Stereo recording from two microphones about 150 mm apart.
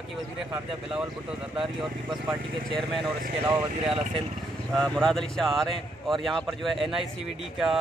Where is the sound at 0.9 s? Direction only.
5° right (ahead or behind).